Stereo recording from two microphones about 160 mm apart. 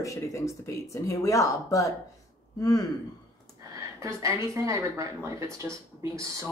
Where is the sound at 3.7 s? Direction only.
20° right (ahead or behind).